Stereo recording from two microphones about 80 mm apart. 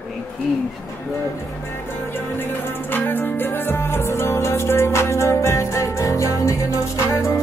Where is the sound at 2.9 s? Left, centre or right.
Left.